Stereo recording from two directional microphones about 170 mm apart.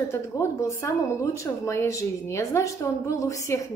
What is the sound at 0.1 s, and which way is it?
Speech, 15° left (ahead or behind).